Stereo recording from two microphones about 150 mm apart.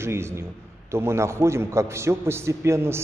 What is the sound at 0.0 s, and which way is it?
A man's voice, 15° right (ahead or behind).